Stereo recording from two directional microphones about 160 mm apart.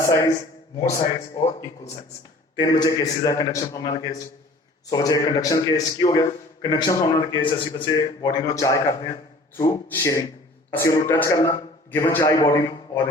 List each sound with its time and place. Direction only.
0.0 s a man's voice: 20° left (ahead or behind)
2.6 s a man's voice: 25° left (ahead or behind)